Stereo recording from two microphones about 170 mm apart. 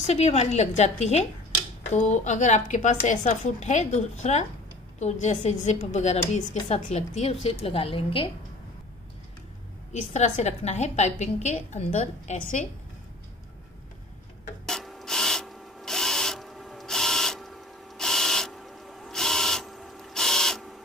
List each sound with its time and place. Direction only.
0.0 s a woman's voice: 40° left (ahead or behind)
9.9 s a woman's voice: 45° left (ahead or behind)
14.7 s rub: centre (ahead or behind)